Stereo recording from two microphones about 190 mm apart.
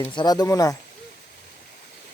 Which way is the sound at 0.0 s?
25° left (ahead or behind).